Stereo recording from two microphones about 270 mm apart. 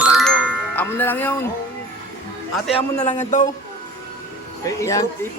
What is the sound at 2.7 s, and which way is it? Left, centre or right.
Speech, left.